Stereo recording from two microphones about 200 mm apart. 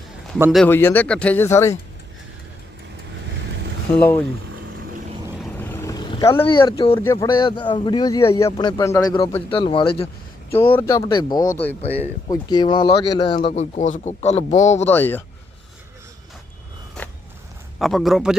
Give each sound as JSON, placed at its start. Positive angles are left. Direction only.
{"t": 0.5, "sound": "speech", "side_deg": 10}
{"t": 5.5, "sound": "vehicle", "side_deg": 10}
{"t": 6.4, "sound": "speech", "side_deg": 20}
{"t": 10.5, "sound": "speech", "side_deg": 10}
{"t": 11.5, "sound": "speech", "side_deg": 10}
{"t": 11.9, "sound": "speech", "side_deg": -10}
{"t": 12.3, "sound": "speech", "side_deg": 20}
{"t": 14.8, "sound": "speech", "side_deg": 10}
{"t": 17.7, "sound": "speech", "side_deg": 0}